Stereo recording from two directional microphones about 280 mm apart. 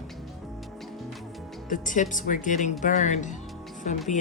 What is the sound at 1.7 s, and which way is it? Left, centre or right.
Speech, left.